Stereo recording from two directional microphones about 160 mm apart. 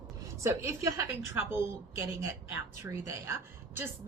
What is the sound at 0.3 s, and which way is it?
A woman's voice, 20° right (ahead or behind).